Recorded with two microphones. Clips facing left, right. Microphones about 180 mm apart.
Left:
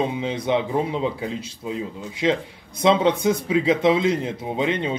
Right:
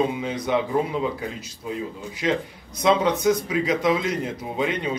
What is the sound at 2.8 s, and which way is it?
Speech, 25° left (ahead or behind).